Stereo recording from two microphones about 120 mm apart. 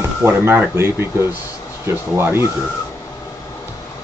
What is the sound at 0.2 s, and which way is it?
Speech, 20° right (ahead or behind).